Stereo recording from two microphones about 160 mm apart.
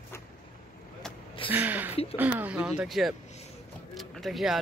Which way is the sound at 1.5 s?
10° right (ahead or behind).